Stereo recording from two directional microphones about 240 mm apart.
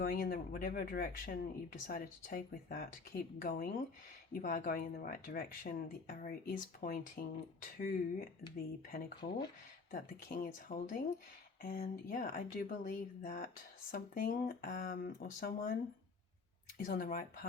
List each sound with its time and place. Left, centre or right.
0.0 s speech: left
9.9 s speech: left